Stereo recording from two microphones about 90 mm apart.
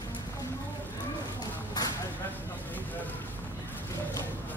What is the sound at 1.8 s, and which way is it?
Vehicle, 50° left (ahead or behind).